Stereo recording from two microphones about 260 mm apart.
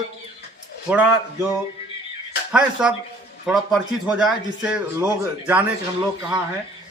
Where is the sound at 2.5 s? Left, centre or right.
Centre.